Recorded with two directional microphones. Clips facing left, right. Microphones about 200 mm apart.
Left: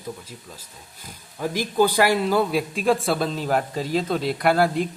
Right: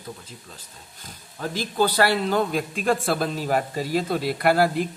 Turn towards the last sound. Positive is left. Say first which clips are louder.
# even
turn(degrees=-5)  # may be behind; listen again after turning